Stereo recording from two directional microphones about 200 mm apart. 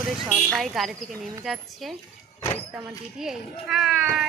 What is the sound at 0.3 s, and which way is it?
Speech, centre (ahead or behind).